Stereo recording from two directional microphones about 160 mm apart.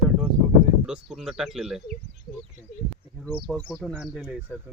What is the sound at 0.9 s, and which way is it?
Speech, centre (ahead or behind).